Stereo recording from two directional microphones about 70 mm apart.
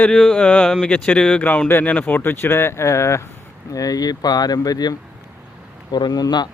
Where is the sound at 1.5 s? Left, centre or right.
Left.